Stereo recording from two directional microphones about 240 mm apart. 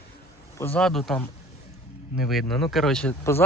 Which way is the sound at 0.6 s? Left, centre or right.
Centre.